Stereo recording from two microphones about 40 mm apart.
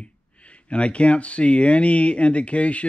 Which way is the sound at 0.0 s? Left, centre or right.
Left.